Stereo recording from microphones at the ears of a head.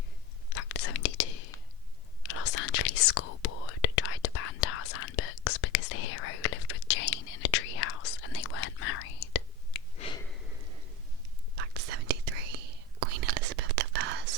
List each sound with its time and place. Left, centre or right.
0.5 s whispering: left
11.5 s whispering: right